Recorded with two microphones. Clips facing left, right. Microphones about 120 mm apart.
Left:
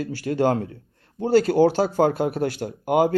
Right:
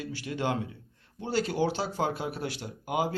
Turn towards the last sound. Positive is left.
turn(degrees=50)  # may be behind; listen again after turning